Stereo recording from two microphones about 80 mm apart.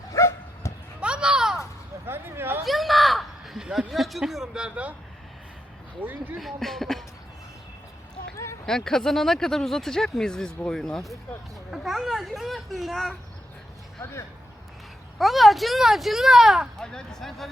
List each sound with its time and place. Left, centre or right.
0.1 s bow-wow: left
0.9 s a sound: centre
2.0 s a sound: right
2.6 s speech: centre
6.0 s speech: right
6.3 s speech: centre
8.6 s speech: centre
14.0 s speech: left
15.2 s speech: centre
16.8 s speech: centre